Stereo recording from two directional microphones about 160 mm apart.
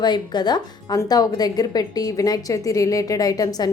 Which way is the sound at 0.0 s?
25° left (ahead or behind).